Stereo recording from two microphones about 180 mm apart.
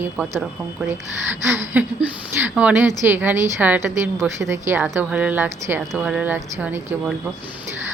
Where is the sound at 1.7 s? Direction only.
10° right (ahead or behind).